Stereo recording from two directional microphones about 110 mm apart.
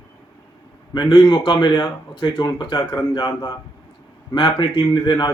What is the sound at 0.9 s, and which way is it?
A man's voice, 45° left (ahead or behind).